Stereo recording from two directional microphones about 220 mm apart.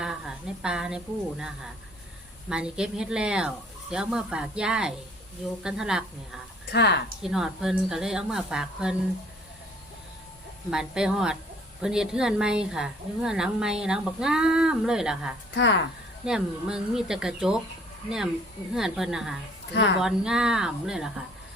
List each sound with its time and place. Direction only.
0.0 s a woman's voice: 5° right (ahead or behind)
6.7 s a woman's voice: 50° left (ahead or behind)
7.2 s a woman's voice: centre (ahead or behind)
10.7 s a woman's voice: 5° right (ahead or behind)
15.5 s a woman's voice: 55° left (ahead or behind)
16.2 s a woman's voice: 5° right (ahead or behind)
18.7 s a woman's voice: centre (ahead or behind)
19.7 s a woman's voice: 50° left (ahead or behind)
20.0 s a woman's voice: centre (ahead or behind)